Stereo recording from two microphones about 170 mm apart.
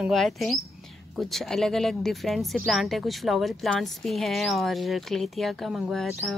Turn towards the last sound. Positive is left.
turn(degrees=0)  # may be behind; listen again after turning